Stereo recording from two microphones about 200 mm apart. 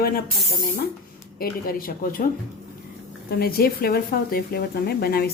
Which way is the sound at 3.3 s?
50° left (ahead or behind).